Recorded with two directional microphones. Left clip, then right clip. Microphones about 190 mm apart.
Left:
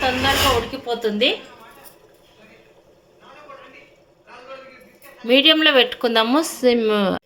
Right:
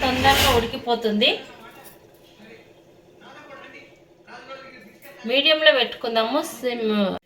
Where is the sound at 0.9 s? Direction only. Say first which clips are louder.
Left 2 dB; 60° left (ahead or behind).